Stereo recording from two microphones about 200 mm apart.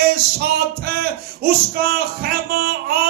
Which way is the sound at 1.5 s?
50° right (ahead or behind).